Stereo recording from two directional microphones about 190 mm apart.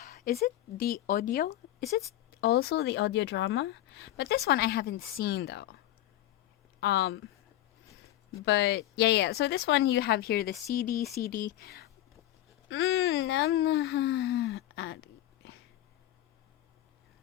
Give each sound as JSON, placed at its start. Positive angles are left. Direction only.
{"t": 0.0, "sound": "a woman's voice", "side_deg": 45}
{"t": 6.7, "sound": "speech", "side_deg": 60}
{"t": 8.4, "sound": "a woman's voice", "side_deg": 65}
{"t": 12.6, "sound": "speech", "side_deg": 85}